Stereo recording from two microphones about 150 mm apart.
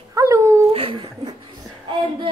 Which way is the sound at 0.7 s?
40° right (ahead or behind).